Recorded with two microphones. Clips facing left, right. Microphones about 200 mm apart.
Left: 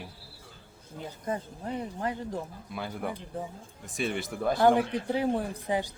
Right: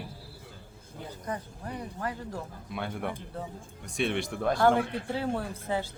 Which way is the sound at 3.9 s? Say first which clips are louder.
Right 2 dB; centre (ahead or behind).